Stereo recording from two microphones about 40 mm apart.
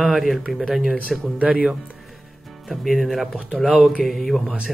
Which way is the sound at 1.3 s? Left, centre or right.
Right.